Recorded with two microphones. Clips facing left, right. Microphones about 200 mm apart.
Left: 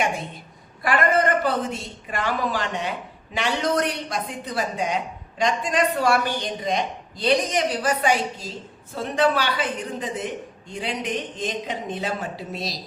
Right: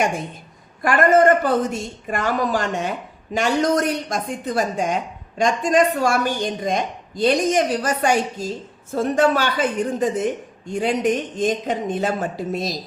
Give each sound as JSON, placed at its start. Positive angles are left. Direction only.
{"t": 0.8, "sound": "a woman's voice", "side_deg": -45}